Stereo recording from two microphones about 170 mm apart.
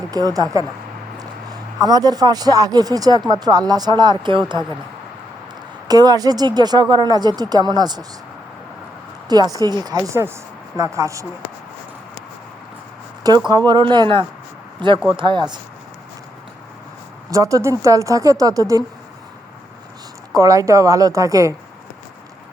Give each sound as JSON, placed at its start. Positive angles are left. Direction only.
{"t": 0.1, "sound": "a man's voice", "side_deg": -20}
{"t": 5.9, "sound": "speech", "side_deg": -20}
{"t": 9.3, "sound": "speech", "side_deg": -20}
{"t": 13.2, "sound": "speech", "side_deg": -25}
{"t": 17.3, "sound": "speech", "side_deg": -20}
{"t": 20.3, "sound": "speech", "side_deg": -20}